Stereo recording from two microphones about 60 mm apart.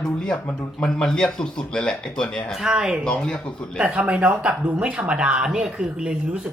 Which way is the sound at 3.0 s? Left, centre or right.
Centre.